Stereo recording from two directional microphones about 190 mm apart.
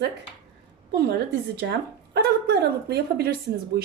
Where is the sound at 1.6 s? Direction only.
60° right (ahead or behind).